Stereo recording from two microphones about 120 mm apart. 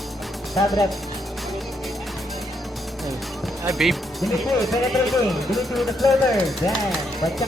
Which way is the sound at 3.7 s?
Centre (ahead or behind).